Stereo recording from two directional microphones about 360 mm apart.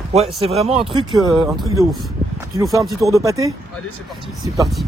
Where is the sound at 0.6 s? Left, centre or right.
Centre.